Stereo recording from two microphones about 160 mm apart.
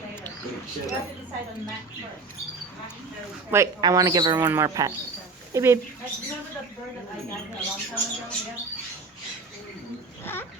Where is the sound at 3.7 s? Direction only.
25° right (ahead or behind).